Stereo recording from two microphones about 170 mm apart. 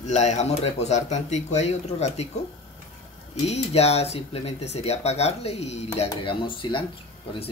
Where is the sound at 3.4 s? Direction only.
40° left (ahead or behind).